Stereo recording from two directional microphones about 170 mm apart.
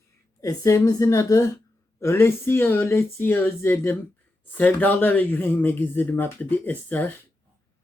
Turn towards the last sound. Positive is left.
turn(degrees=10)  # may be behind; listen again after turning